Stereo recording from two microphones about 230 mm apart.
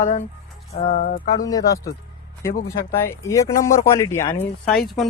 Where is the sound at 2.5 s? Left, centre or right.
Left.